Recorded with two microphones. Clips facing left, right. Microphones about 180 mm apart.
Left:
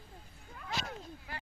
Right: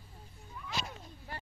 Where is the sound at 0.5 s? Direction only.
65° left (ahead or behind).